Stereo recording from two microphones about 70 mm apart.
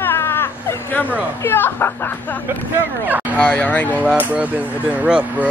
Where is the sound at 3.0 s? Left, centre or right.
Right.